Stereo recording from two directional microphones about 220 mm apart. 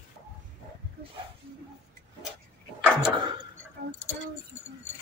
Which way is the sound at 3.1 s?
20° right (ahead or behind).